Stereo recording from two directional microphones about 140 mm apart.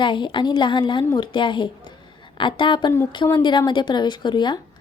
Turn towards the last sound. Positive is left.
turn(degrees=35)  # may be behind; listen again after turning